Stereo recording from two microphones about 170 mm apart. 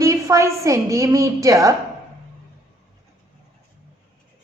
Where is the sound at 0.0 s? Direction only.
20° right (ahead or behind).